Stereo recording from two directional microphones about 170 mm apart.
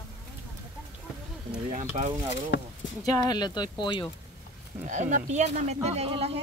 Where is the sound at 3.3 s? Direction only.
25° left (ahead or behind).